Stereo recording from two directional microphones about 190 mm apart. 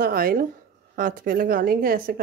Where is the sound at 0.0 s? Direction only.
50° right (ahead or behind).